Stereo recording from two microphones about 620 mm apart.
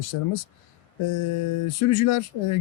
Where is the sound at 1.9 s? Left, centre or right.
Left.